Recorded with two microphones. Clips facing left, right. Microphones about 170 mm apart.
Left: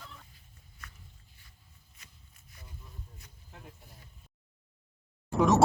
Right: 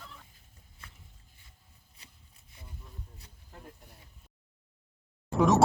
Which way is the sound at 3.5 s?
Centre (ahead or behind).